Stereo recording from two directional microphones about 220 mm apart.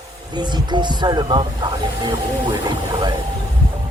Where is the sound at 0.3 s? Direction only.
20° right (ahead or behind).